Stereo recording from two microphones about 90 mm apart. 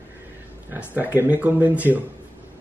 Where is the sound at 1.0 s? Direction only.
20° right (ahead or behind).